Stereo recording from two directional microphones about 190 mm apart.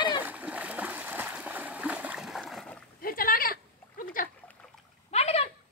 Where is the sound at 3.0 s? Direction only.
50° left (ahead or behind).